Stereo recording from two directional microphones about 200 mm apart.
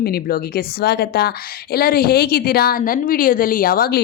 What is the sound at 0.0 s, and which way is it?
A woman's voice, 50° left (ahead or behind).